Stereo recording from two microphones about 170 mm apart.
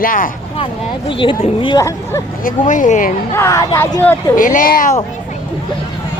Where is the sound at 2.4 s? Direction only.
50° left (ahead or behind).